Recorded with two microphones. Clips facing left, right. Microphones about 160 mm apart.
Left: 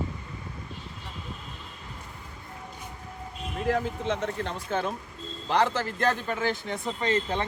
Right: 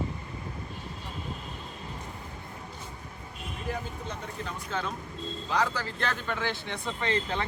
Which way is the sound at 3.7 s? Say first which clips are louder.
Left 9 dB; 90° left.